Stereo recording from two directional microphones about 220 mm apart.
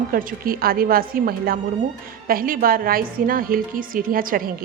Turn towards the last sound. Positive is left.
turn(degrees=-40)  # may be behind; listen again after turning